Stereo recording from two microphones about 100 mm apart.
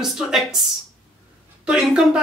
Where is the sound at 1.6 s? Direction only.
10° right (ahead or behind).